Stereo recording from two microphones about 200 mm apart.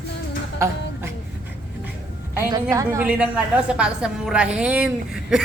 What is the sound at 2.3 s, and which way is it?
A woman's voice, 15° right (ahead or behind).